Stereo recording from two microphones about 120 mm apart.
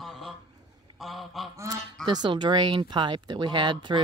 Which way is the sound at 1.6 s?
30° right (ahead or behind).